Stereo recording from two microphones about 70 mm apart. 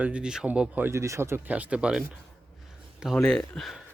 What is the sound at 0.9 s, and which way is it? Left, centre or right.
Speech, right.